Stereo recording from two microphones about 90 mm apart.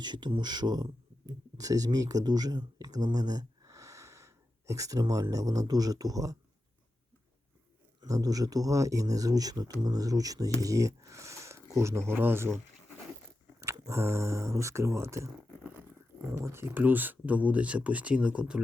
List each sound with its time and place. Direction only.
0.0 s speech: 55° right (ahead or behind); by 6.3 s 40° right (ahead or behind)
8.0 s speech: 40° right (ahead or behind)
13.8 s speech: 30° right (ahead or behind); by 18.6 s 10° right (ahead or behind)